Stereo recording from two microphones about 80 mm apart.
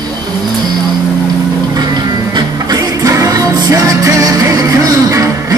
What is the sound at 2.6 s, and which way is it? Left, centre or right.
Music, right.